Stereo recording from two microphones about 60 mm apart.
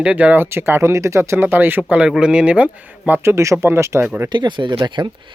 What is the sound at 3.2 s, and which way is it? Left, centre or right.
Speech, right.